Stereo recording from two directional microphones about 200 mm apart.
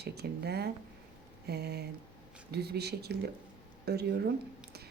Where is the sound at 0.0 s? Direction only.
55° right (ahead or behind).